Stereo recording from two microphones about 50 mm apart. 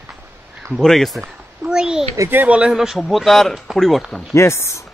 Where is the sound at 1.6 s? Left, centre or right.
Centre.